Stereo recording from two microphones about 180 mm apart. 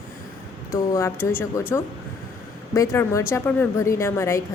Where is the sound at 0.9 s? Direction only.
15° left (ahead or behind).